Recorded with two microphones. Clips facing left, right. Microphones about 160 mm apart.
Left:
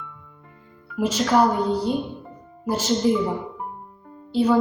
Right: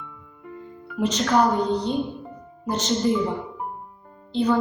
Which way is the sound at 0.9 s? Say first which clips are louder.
Left 1 dB; 5° left (ahead or behind).